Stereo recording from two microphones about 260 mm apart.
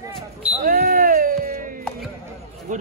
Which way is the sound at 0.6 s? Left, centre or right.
Right.